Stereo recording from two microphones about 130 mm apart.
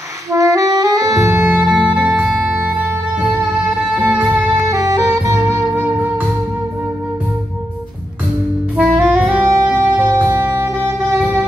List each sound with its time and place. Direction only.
0.3 s saxophone: 25° right (ahead or behind)
1.7 s music: 5° right (ahead or behind)
3.8 s music: 5° right (ahead or behind)
4.6 s music: 25° right (ahead or behind)
8.7 s saxophone: 10° right (ahead or behind)
9.7 s music: 15° right (ahead or behind)